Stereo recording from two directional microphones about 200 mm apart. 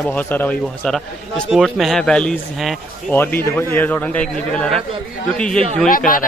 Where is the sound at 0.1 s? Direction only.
10° left (ahead or behind).